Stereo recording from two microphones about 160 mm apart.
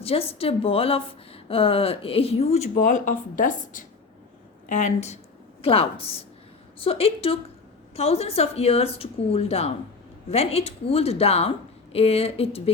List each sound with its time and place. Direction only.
0.0 s a woman's voice: 35° left (ahead or behind)